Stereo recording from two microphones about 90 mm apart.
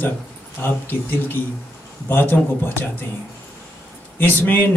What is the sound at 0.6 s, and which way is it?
A man's voice, 20° left (ahead or behind).